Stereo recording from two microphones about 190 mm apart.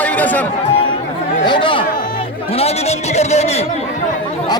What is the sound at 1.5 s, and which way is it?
A man's voice, 25° left (ahead or behind).